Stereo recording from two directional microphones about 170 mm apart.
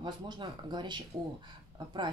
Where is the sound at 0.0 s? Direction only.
25° right (ahead or behind).